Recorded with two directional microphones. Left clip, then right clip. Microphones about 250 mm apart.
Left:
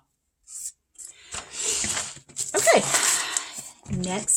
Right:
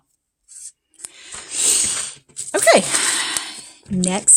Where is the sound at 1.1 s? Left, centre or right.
Right.